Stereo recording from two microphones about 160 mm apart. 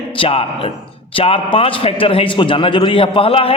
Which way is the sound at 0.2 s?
35° left (ahead or behind).